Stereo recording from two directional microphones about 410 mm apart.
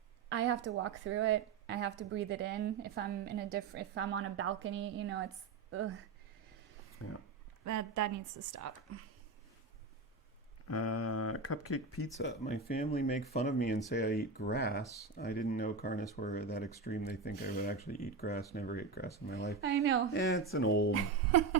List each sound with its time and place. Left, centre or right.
0.3 s a woman's voice: right
7.0 s speech: left
7.6 s a woman's voice: right
10.7 s speech: left
12.4 s speech: left
19.6 s a woman's voice: right
20.5 s speech: left
20.9 s speech: right